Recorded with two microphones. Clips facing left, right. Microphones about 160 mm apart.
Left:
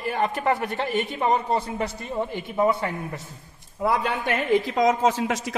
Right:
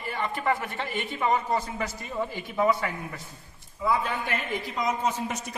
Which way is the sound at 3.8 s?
70° left (ahead or behind).